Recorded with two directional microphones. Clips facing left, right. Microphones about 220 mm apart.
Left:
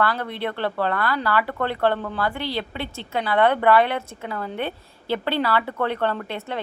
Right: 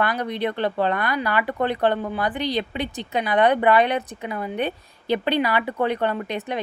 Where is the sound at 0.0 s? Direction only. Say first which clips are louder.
Right 1 dB; 15° right (ahead or behind).